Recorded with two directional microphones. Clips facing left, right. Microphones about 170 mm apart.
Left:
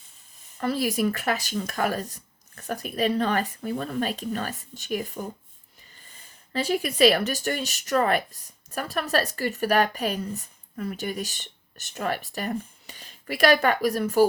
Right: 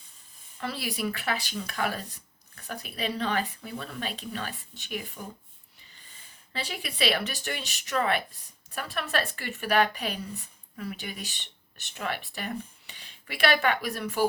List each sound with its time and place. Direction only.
0.6 s speech: 45° left (ahead or behind)
6.5 s speech: 45° left (ahead or behind)